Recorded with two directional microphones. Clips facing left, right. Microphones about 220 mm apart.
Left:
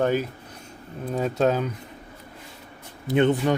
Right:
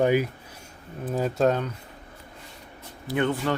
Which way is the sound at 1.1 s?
Centre (ahead or behind).